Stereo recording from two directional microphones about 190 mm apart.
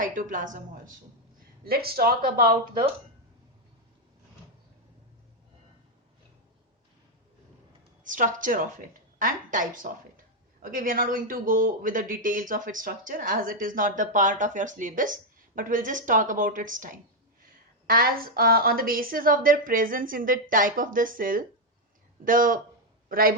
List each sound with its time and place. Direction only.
0.0 s a woman's voice: 45° right (ahead or behind)
8.0 s a man's voice: 45° right (ahead or behind)